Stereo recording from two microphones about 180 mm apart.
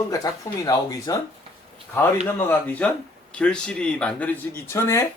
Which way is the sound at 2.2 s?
10° left (ahead or behind).